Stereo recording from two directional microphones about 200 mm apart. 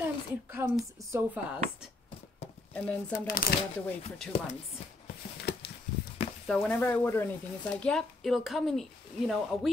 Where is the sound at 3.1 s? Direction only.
45° left (ahead or behind).